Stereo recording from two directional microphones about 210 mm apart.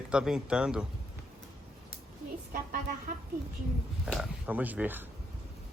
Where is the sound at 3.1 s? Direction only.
40° right (ahead or behind).